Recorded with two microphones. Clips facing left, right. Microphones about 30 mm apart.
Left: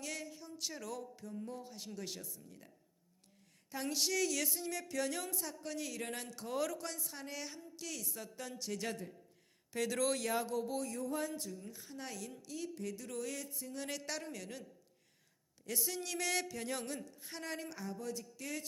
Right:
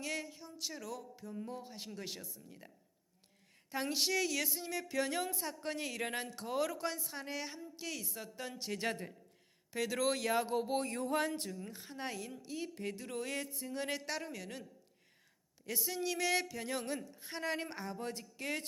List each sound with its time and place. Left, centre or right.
0.0 s speech: centre
0.7 s speech: centre; by 9.0 s right
9.7 s speech: centre
10.4 s speech: right
11.0 s speech: right
11.7 s speech: right; by 14.6 s centre
15.6 s speech: centre
17.5 s speech: right